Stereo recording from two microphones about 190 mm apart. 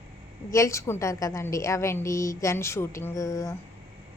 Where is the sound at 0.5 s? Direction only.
15° left (ahead or behind).